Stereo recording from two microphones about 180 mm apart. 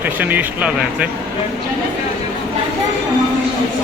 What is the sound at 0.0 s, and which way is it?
A man's voice, 10° right (ahead or behind).